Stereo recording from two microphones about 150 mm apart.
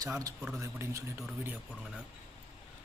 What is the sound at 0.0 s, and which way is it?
Speech, 25° right (ahead or behind).